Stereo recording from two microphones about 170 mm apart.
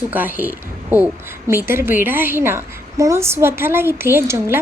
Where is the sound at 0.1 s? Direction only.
10° right (ahead or behind).